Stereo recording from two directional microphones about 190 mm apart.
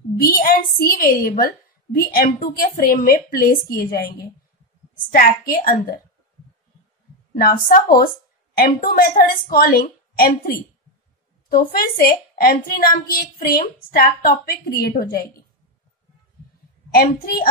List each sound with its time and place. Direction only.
0.2 s a woman's voice: 50° left (ahead or behind)
5.1 s a woman's voice: 50° left (ahead or behind)
7.3 s a woman's voice: 50° left (ahead or behind)
16.9 s a woman's voice: 50° left (ahead or behind)